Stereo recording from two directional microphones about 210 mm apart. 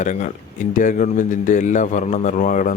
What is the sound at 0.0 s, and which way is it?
A man's voice, 35° left (ahead or behind).